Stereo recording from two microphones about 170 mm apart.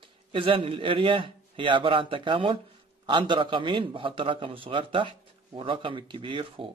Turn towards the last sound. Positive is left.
turn(degrees=-30)  # may be behind; listen again after turning